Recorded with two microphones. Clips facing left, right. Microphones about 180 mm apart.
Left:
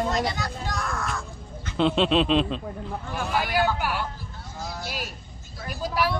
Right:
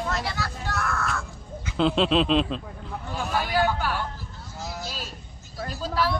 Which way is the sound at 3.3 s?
15° left (ahead or behind).